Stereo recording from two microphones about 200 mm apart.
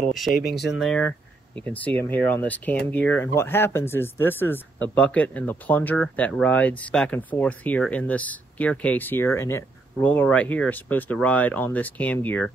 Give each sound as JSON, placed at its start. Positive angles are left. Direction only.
{"t": 0.1, "sound": "speech", "side_deg": 0}
{"t": 0.4, "sound": "speech", "side_deg": 50}
{"t": 0.7, "sound": "speech", "side_deg": 0}